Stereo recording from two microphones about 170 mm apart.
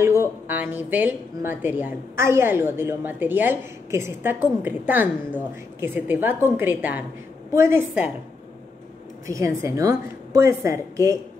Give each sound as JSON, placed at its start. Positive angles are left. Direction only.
{"t": 0.0, "sound": "speech", "side_deg": -15}
{"t": 9.3, "sound": "a woman's voice", "side_deg": -20}